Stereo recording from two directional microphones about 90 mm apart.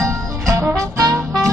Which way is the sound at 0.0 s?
35° right (ahead or behind).